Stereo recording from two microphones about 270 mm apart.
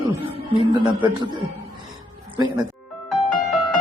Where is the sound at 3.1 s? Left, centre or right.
Centre.